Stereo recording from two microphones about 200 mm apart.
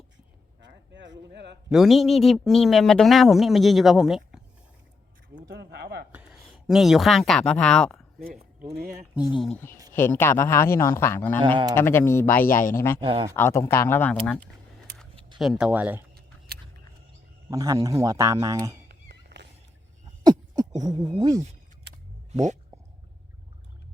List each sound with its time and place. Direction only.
0.6 s speech: 60° right (ahead or behind)
1.7 s speech: centre (ahead or behind)
5.4 s a sound: 50° right (ahead or behind)
6.1 s speech: 5° right (ahead or behind)
9.1 s speech: 5° right (ahead or behind)
9.9 s a man's voice: 10° left (ahead or behind)
12.5 s speech: 40° left (ahead or behind)
12.7 s a man's voice: 10° left (ahead or behind)
13.0 s speech: 25° right (ahead or behind)
13.3 s a man's voice: 10° left (ahead or behind); by 16.0 s 10° right (ahead or behind)
16.5 s a sound: 50° right (ahead or behind)
17.5 s speech: 15° right (ahead or behind)
18.9 s cat: 55° right (ahead or behind)
20.2 s beatboxing: 20° right (ahead or behind)